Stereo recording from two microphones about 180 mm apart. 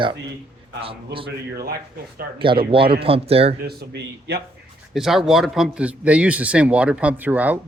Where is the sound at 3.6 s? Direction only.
65° right (ahead or behind).